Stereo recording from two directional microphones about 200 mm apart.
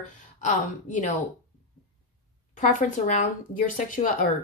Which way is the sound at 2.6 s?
40° left (ahead or behind).